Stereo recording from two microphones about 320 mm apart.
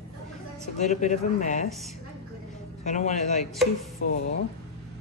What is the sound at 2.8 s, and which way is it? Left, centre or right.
Speech, left.